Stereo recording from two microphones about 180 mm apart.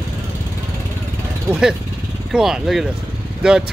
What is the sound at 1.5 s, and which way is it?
Speech, 5° right (ahead or behind).